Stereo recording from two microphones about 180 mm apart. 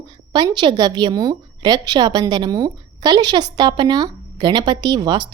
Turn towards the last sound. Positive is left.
turn(degrees=-25)  # may be behind; listen again after turning